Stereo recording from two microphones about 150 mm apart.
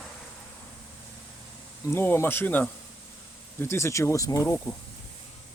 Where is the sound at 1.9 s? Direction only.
15° left (ahead or behind).